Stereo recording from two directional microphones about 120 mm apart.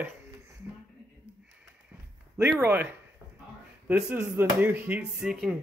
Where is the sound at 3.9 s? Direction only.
15° right (ahead or behind).